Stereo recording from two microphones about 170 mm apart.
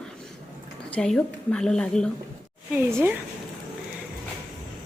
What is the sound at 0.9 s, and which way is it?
A woman's voice, 5° left (ahead or behind).